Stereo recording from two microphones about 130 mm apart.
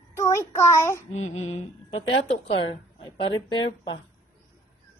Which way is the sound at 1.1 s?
60° left (ahead or behind).